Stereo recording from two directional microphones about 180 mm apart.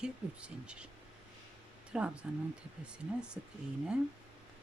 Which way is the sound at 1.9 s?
5° right (ahead or behind).